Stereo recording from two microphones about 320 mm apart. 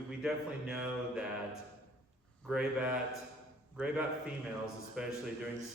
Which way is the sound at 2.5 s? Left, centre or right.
Centre.